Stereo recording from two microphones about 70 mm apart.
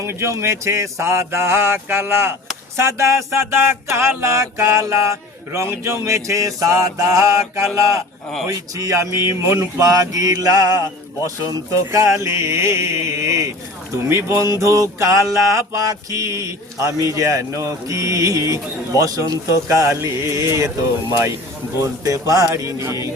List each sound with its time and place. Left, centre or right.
0.0 s a sound: right
5.8 s mantra: right
8.4 s mantra: right
11.7 s mantra: right
19.6 s mantra: right
21.1 s a sound: right
22.0 s mantra: right